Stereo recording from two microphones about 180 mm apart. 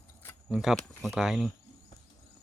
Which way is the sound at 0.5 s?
5° right (ahead or behind).